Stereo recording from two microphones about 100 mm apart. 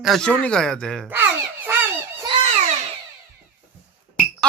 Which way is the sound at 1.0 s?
20° right (ahead or behind).